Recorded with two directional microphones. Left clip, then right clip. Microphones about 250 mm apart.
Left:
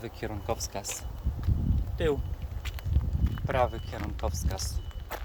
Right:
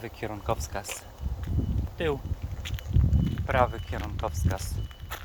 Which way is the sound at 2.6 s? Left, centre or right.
Centre.